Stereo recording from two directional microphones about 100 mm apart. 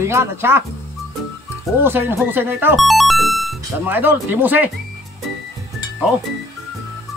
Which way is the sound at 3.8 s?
20° right (ahead or behind).